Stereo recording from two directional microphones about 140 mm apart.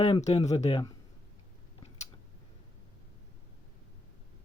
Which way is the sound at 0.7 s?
30° left (ahead or behind).